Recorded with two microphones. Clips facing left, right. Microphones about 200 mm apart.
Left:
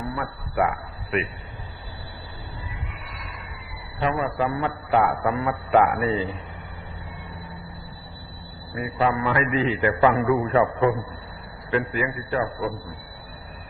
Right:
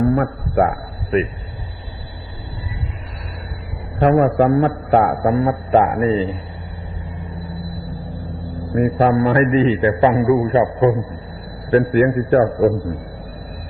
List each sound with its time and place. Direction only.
0.0 s a man's voice: 50° right (ahead or behind)
4.0 s a man's voice: 50° right (ahead or behind); by 6.3 s 30° right (ahead or behind)
8.7 s a man's voice: 45° right (ahead or behind)
9.8 s a man's voice: 20° right (ahead or behind)
11.7 s a man's voice: 40° right (ahead or behind)